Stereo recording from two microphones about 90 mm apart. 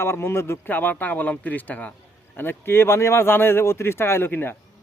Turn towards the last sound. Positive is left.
turn(degrees=25)  # may be behind; listen again after turning